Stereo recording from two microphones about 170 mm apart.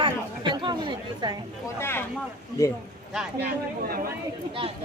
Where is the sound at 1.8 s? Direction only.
15° left (ahead or behind).